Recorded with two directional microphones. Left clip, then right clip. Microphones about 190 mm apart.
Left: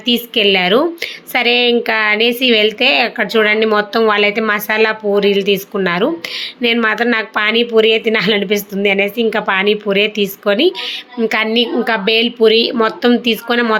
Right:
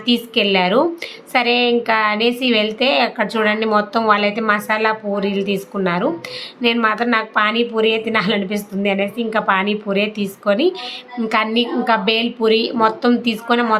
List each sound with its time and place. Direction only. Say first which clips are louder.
0.0 s a woman's voice: left 4 dB; 10° left (ahead or behind)